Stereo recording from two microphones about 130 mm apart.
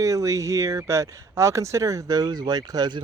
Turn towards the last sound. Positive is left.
turn(degrees=-35)  # may be behind; listen again after turning